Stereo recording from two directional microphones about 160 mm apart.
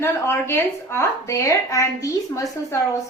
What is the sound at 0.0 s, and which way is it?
A woman's voice, 15° left (ahead or behind).